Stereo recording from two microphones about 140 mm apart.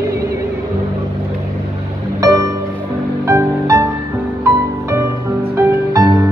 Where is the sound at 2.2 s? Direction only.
25° right (ahead or behind).